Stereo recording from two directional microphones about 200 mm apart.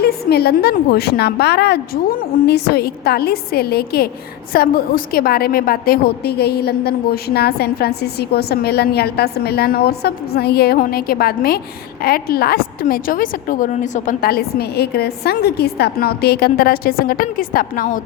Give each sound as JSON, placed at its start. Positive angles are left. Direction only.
{"t": 0.0, "sound": "a woman's voice", "side_deg": 50}